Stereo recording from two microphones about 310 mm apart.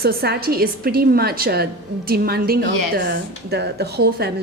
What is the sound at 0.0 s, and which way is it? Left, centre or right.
A woman's voice, right.